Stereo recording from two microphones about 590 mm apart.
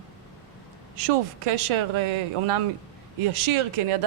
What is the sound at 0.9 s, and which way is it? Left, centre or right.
Speech, right.